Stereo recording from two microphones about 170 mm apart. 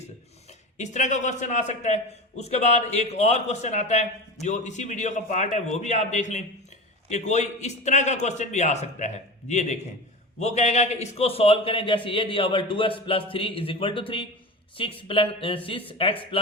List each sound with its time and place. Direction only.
0.8 s a man's voice: 45° left (ahead or behind)